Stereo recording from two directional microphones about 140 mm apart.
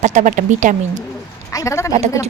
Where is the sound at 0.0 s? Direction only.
60° right (ahead or behind).